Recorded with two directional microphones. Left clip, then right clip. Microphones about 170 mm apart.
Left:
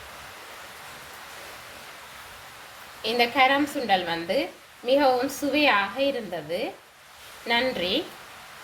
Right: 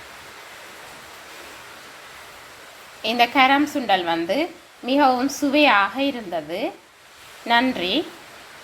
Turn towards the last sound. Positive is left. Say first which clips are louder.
# right 5 dB
turn(degrees=-15)  # may be behind; listen again after turning